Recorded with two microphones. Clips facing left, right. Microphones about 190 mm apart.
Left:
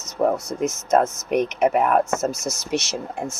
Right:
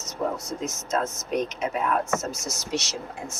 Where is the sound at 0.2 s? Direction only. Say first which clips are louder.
Left 8 dB; 60° left (ahead or behind).